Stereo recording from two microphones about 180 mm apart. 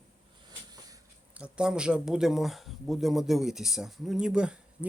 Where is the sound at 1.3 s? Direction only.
5° right (ahead or behind).